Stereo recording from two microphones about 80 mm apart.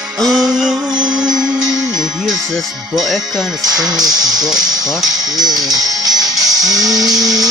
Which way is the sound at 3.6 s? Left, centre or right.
Right.